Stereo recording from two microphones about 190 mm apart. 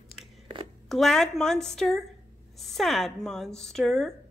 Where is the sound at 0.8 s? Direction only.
Centre (ahead or behind).